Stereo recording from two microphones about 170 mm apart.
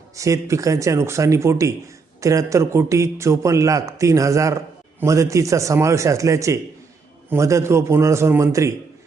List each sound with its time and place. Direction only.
0.2 s a man's voice: 20° right (ahead or behind)